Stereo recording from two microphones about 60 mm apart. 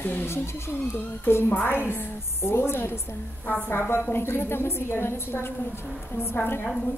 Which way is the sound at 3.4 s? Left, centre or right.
Left.